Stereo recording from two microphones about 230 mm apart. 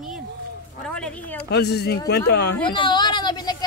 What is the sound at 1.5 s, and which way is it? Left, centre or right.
Speech, left.